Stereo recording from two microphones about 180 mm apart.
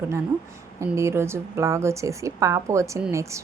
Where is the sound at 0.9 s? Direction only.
15° right (ahead or behind).